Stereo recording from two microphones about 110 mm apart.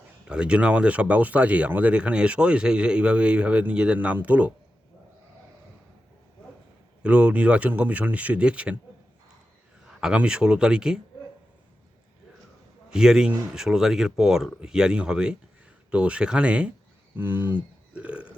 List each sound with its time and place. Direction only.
0.3 s speech: 10° right (ahead or behind)
7.0 s speech: 10° right (ahead or behind)
9.8 s speech: 5° right (ahead or behind)
12.9 s speech: 5° right (ahead or behind)
17.9 s burping: 10° right (ahead or behind)